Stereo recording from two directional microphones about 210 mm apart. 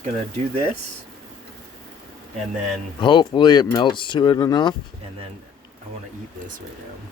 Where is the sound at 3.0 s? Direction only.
20° left (ahead or behind).